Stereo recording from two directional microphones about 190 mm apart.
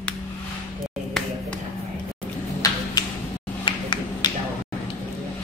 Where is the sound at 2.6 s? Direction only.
20° left (ahead or behind).